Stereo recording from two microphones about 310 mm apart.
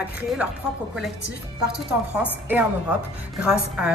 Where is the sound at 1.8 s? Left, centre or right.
Centre.